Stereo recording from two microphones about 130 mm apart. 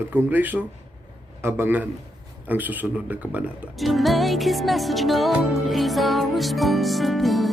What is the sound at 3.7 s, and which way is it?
Music, centre (ahead or behind).